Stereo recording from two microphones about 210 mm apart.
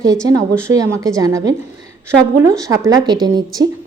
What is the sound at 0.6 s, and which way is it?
Speech, 15° right (ahead or behind).